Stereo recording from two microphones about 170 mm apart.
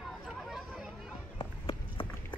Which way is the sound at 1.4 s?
30° left (ahead or behind).